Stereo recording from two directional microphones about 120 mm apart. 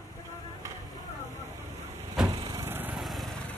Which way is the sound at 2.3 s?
30° right (ahead or behind).